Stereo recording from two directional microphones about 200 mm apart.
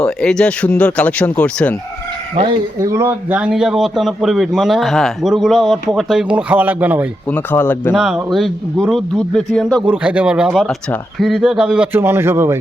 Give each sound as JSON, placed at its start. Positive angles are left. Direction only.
{"t": 0.0, "sound": "a man's voice", "side_deg": 5}
{"t": 2.3, "sound": "speech", "side_deg": -30}
{"t": 2.7, "sound": "a man's voice", "side_deg": -15}
{"t": 7.3, "sound": "speech", "side_deg": 10}
{"t": 7.9, "sound": "a man's voice", "side_deg": -5}